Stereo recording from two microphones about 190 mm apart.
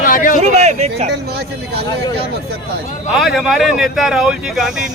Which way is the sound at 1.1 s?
60° right (ahead or behind).